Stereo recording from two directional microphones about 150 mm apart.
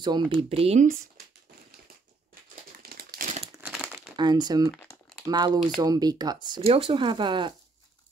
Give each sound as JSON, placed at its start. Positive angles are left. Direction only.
{"t": 0.0, "sound": "speech", "side_deg": -30}
{"t": 2.8, "sound": "crumpling", "side_deg": -90}
{"t": 4.2, "sound": "speech", "side_deg": -30}
{"t": 6.7, "sound": "speech", "side_deg": -35}